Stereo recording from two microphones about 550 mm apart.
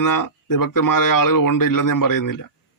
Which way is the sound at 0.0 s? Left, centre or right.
Left.